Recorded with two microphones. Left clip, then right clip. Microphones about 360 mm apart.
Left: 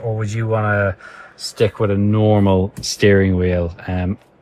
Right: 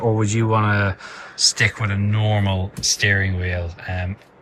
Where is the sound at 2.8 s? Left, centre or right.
Centre.